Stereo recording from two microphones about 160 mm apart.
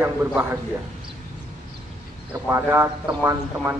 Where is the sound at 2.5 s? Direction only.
15° right (ahead or behind).